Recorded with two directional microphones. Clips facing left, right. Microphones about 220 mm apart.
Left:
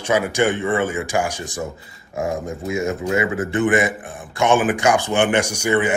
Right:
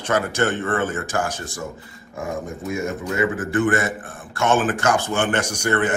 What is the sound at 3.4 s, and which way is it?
A man's voice, 20° left (ahead or behind).